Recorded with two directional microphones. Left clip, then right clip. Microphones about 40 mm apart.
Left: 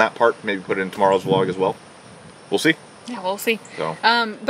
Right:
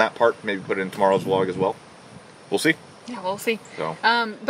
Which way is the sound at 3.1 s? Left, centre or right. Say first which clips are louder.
Left 3 dB; left.